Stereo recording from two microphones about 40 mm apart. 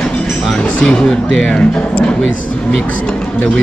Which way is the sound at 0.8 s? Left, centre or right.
Centre.